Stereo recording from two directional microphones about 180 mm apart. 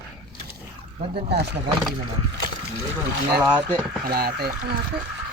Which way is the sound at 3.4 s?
10° right (ahead or behind).